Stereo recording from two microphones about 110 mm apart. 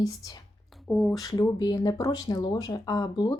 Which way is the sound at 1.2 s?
35° left (ahead or behind).